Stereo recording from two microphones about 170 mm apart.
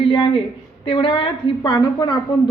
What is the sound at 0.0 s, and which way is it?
A woman's voice, 30° left (ahead or behind).